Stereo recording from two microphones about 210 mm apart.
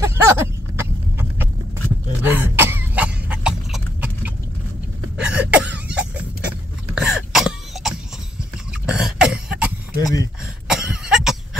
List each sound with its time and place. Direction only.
0.0 s a sound: 10° right (ahead or behind)
2.2 s cough: 10° right (ahead or behind)
7.0 s throat clearing: centre (ahead or behind)
8.7 s cough: 5° right (ahead or behind)
9.9 s a sound: 15° left (ahead or behind)
10.4 s cough: 5° right (ahead or behind)